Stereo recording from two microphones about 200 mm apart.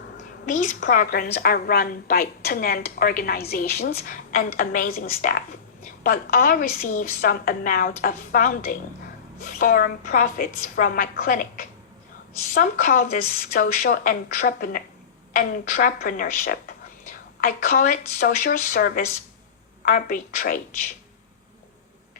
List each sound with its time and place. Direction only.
0.4 s a woman's voice: 40° left (ahead or behind)